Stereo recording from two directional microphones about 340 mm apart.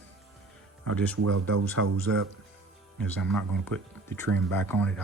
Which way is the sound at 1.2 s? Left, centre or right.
Right.